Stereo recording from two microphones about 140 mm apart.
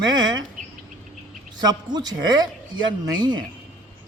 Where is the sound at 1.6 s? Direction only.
30° right (ahead or behind).